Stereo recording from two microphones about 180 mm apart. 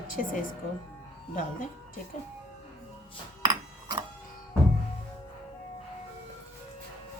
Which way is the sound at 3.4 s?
25° right (ahead or behind).